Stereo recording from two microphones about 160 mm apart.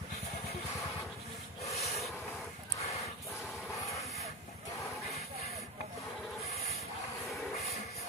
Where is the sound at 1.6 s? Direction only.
40° left (ahead or behind).